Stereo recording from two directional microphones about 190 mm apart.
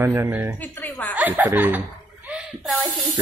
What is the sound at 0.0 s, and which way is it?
Speech, 15° right (ahead or behind).